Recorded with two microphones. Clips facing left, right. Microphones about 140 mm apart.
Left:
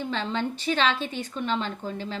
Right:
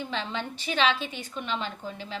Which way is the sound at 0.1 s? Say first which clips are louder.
Left 4 dB; 15° right (ahead or behind).